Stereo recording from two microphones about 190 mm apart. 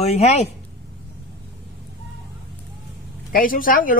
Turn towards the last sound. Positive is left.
turn(degrees=45)  # may be behind; listen again after turning